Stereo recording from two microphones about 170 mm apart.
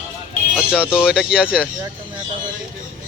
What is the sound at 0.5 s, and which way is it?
Speech, 5° right (ahead or behind).